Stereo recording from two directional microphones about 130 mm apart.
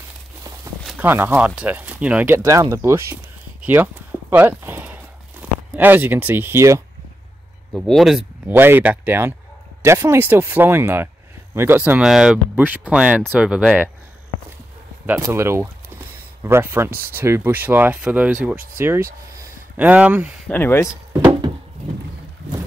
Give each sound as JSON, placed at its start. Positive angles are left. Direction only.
{"t": 0.9, "sound": "speech", "side_deg": -15}
{"t": 3.6, "sound": "walk", "side_deg": -15}
{"t": 7.7, "sound": "speech", "side_deg": 0}
{"t": 8.5, "sound": "speech", "side_deg": -15}
{"t": 15.0, "sound": "speech", "side_deg": -20}
{"t": 20.4, "sound": "speech", "side_deg": 15}